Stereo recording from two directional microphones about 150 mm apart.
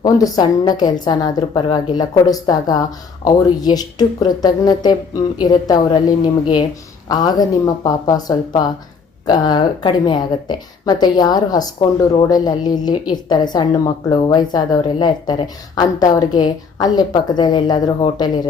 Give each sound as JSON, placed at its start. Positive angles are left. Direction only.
{"t": 0.0, "sound": "a woman's voice", "side_deg": 25}